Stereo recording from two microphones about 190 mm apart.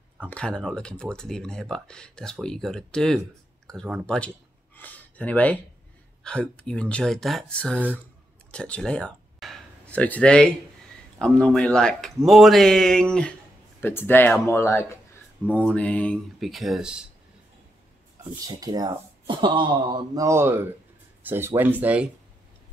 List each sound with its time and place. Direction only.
0.3 s speech: 5° left (ahead or behind)
18.5 s speech: 20° right (ahead or behind)